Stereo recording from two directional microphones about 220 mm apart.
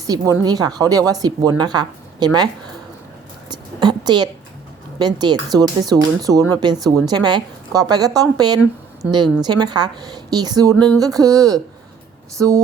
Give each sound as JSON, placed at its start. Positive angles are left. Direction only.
{"t": 0.1, "sound": "a woman's voice", "side_deg": -15}
{"t": 3.5, "sound": "a sound", "side_deg": -20}
{"t": 4.9, "sound": "a woman's voice", "side_deg": -20}